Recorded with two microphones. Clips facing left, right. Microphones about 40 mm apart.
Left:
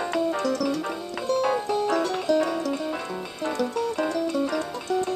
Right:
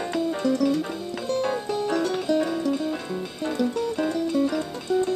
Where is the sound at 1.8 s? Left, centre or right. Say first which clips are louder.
Even; centre.